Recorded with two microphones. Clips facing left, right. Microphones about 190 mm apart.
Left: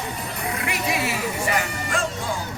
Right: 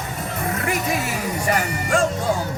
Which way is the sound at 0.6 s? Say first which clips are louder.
Right 1 dB; 45° right (ahead or behind).